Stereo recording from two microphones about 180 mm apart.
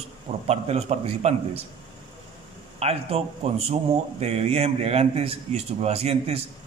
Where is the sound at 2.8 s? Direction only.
35° right (ahead or behind).